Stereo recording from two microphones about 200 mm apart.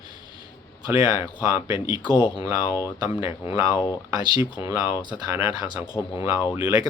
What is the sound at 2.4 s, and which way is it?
Speech, 15° right (ahead or behind).